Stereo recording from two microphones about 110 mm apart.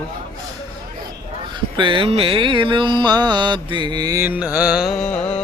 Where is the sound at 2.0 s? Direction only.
60° right (ahead or behind); by 4.2 s 40° right (ahead or behind).